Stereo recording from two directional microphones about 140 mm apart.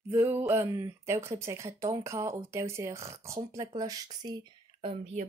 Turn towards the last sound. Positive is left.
turn(degrees=-50)  # may be behind; listen again after turning